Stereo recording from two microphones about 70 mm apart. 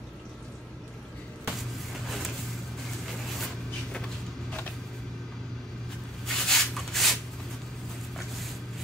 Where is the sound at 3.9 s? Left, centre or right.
Centre.